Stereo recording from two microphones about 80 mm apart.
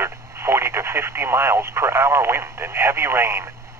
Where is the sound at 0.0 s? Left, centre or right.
Right.